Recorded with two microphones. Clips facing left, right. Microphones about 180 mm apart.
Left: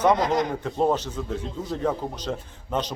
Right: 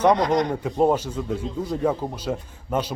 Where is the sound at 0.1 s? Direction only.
Centre (ahead or behind).